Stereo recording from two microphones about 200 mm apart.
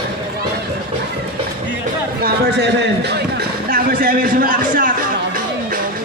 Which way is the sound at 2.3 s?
55° right (ahead or behind).